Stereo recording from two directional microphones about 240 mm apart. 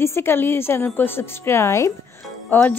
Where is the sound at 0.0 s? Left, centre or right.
Centre.